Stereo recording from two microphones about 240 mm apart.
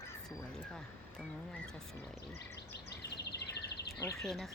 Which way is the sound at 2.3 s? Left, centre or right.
Left.